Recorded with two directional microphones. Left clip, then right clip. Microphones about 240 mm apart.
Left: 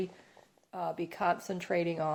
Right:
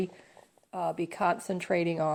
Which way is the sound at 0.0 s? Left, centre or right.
Right.